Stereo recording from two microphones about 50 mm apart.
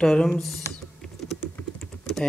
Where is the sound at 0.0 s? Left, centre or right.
Centre.